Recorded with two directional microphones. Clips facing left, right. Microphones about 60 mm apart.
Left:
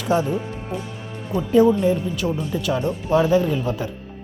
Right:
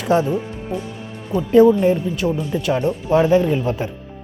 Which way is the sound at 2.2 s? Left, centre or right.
Centre.